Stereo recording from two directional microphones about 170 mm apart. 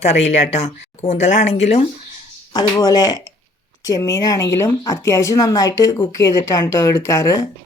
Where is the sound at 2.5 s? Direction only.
20° left (ahead or behind).